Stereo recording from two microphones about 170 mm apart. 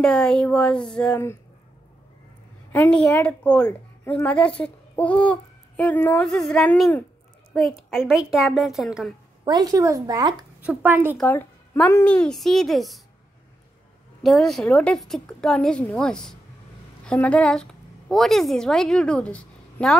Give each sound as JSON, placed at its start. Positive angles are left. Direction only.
{"t": 0.0, "sound": "a woman's voice", "side_deg": 5}
{"t": 2.7, "sound": "a woman's voice", "side_deg": 10}
{"t": 9.4, "sound": "speech", "side_deg": -20}
{"t": 10.6, "sound": "speech", "side_deg": -10}
{"t": 11.1, "sound": "a woman's voice", "side_deg": 10}
{"t": 14.2, "sound": "a woman's voice", "side_deg": 0}